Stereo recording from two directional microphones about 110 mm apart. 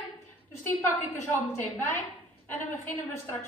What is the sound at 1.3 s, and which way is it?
A woman's voice, 20° left (ahead or behind).